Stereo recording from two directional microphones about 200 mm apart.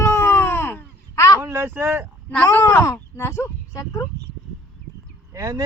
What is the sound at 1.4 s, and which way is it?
Speech, 10° right (ahead or behind).